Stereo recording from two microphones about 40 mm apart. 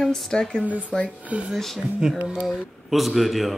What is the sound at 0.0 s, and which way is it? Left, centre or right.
Speech, centre.